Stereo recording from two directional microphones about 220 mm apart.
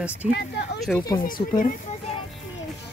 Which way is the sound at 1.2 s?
40° left (ahead or behind).